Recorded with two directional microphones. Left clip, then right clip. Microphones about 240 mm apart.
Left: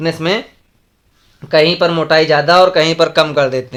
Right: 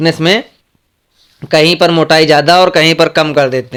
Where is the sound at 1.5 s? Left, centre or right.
Right.